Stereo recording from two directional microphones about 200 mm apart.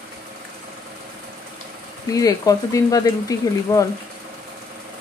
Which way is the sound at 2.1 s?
15° left (ahead or behind).